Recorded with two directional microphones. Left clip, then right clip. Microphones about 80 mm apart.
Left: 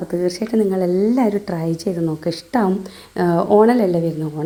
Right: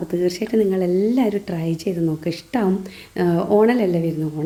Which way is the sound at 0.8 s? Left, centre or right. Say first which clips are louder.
Left 2 dB; centre.